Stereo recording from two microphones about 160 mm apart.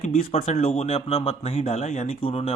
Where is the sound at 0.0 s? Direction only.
45° left (ahead or behind).